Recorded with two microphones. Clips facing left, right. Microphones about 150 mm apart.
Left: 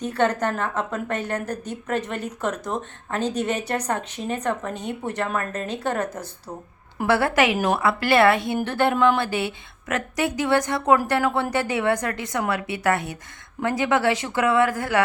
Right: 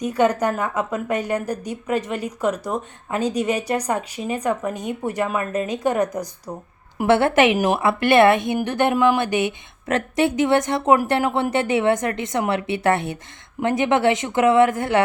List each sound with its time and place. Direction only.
0.0 s a woman's voice: 10° right (ahead or behind)